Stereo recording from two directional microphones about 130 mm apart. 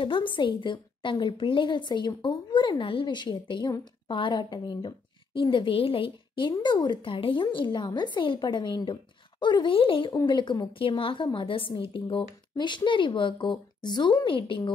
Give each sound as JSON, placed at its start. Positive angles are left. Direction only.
{"t": 0.0, "sound": "a woman's voice", "side_deg": 40}